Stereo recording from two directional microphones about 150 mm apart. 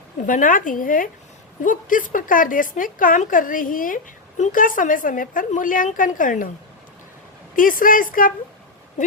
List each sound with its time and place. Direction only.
0.2 s a woman's voice: 65° left (ahead or behind)
7.5 s speech: 65° left (ahead or behind)